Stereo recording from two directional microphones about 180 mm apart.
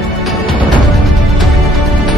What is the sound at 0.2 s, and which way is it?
Music, centre (ahead or behind).